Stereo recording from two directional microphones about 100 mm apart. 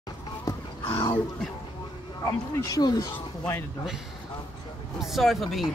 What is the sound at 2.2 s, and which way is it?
Speech, 35° left (ahead or behind).